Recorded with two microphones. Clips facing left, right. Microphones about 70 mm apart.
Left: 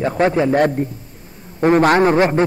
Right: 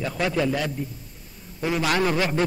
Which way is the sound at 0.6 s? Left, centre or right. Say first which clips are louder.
Left 12 dB; left.